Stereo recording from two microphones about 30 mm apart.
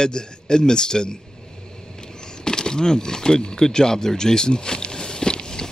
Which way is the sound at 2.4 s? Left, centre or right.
Left.